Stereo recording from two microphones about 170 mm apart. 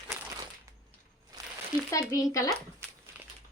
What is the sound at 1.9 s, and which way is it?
Speech, 20° left (ahead or behind).